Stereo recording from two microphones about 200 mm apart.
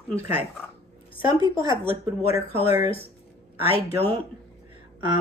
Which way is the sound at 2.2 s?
30° left (ahead or behind).